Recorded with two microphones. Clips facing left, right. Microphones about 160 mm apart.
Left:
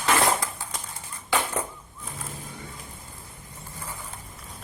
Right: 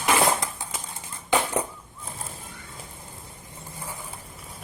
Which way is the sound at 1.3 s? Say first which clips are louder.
Right 3 dB; 15° right (ahead or behind).